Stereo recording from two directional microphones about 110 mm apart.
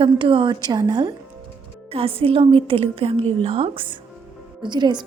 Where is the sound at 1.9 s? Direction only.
60° right (ahead or behind).